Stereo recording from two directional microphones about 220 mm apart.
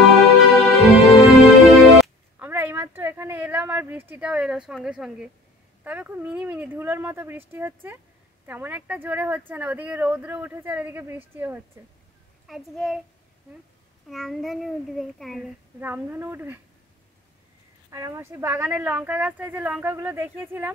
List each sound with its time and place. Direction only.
0.0 s music: centre (ahead or behind)
5.9 s a child's voice: 10° right (ahead or behind)
14.0 s a child's voice: centre (ahead or behind)
17.9 s speech: 15° right (ahead or behind)